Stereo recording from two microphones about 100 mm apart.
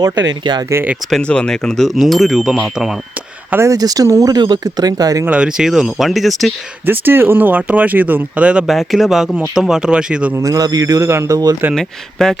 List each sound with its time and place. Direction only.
0.0 s speech: 45° right (ahead or behind)
1.1 s speech: 10° left (ahead or behind); by 3.0 s 5° right (ahead or behind)
3.5 s speech: 30° right (ahead or behind)
5.2 s speech: 10° right (ahead or behind)
6.8 s speech: 20° right (ahead or behind)
8.6 s speech: centre (ahead or behind)
10.3 s speech: 35° right (ahead or behind)
11.7 s speech: 5° left (ahead or behind)